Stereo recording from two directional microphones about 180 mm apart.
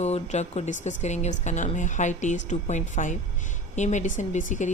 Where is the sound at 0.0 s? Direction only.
40° left (ahead or behind).